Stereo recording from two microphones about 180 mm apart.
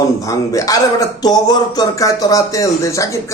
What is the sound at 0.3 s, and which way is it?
Speech, 20° left (ahead or behind).